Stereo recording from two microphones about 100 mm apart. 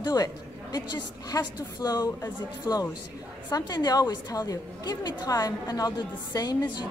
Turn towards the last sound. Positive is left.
turn(degrees=45)  # may be behind; listen again after turning